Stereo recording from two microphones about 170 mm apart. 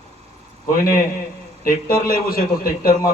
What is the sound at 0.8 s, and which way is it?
A man's voice, 60° left (ahead or behind).